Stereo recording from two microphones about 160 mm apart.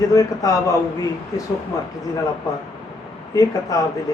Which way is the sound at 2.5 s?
20° left (ahead or behind).